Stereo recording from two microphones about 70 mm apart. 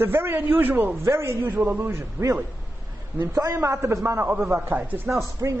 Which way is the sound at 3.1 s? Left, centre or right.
Right.